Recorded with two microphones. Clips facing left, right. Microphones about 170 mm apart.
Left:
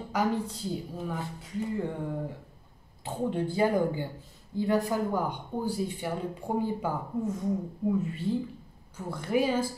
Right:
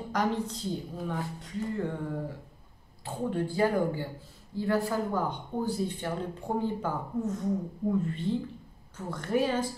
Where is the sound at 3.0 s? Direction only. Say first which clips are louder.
Left 1 dB; 20° left (ahead or behind).